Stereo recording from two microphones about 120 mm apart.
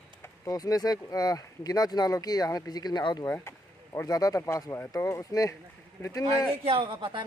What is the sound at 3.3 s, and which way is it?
Speech, 20° left (ahead or behind).